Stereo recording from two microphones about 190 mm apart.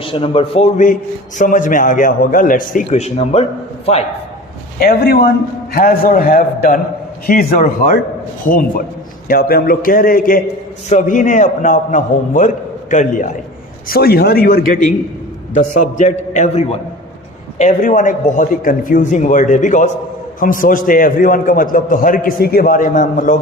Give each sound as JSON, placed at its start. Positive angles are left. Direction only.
{"t": 0.0, "sound": "a man's voice", "side_deg": 30}
{"t": 1.4, "sound": "a man's voice", "side_deg": 45}
{"t": 4.8, "sound": "a man's voice", "side_deg": 55}
{"t": 13.8, "sound": "a man's voice", "side_deg": 50}